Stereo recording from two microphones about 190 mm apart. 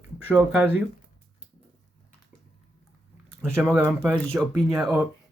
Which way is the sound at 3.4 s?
10° right (ahead or behind).